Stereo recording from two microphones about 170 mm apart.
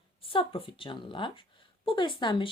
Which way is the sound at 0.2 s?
30° left (ahead or behind).